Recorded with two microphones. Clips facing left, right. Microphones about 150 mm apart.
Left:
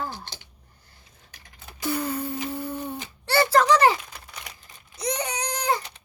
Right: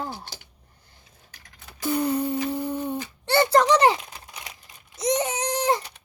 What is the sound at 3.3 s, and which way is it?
Speech, 20° right (ahead or behind).